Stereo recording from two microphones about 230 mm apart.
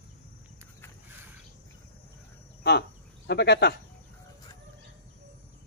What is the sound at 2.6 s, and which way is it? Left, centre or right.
Cricket, left.